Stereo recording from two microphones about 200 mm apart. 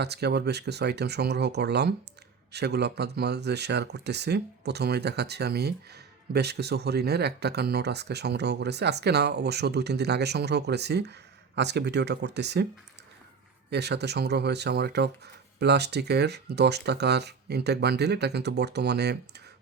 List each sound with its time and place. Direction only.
0.0 s speech: 55° right (ahead or behind)
13.7 s speech: 55° right (ahead or behind)